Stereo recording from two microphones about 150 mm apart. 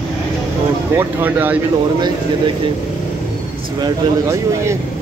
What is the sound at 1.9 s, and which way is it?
Speech, 30° right (ahead or behind).